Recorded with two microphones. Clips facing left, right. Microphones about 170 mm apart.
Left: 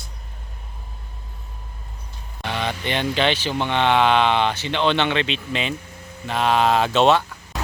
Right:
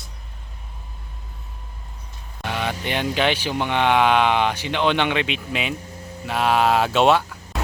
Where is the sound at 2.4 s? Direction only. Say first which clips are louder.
Even; 10° right (ahead or behind).